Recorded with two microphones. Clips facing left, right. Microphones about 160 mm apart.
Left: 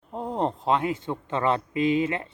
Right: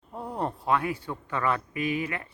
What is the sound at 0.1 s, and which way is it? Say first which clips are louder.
Speech: left 5 dB; 20° left (ahead or behind).